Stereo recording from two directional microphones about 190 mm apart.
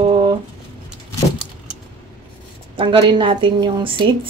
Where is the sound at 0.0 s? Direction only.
25° right (ahead or behind).